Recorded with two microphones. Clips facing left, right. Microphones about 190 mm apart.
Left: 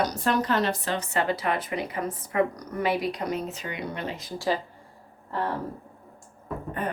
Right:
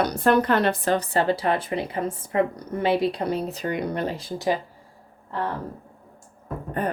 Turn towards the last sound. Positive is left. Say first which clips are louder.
# right 4 dB
turn(degrees=-40)  # may be behind; listen again after turning